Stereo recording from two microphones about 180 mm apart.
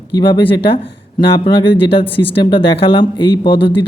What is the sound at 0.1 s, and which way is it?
Speech, 25° left (ahead or behind).